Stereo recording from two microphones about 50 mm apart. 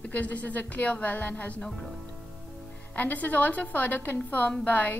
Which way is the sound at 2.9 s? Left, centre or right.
Left.